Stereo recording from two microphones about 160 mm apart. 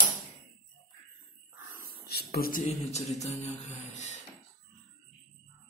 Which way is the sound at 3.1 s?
45° left (ahead or behind).